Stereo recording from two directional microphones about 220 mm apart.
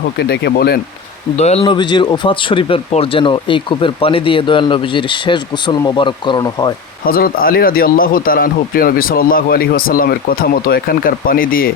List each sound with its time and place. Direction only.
0.2 s speech: 50° left (ahead or behind)
1.4 s speech: 30° left (ahead or behind)
7.0 s speech: 40° left (ahead or behind)